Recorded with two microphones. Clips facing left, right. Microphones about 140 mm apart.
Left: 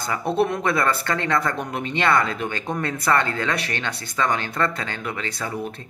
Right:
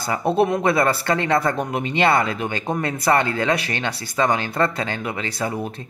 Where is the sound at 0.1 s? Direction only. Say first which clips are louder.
Right 3 dB; 20° right (ahead or behind).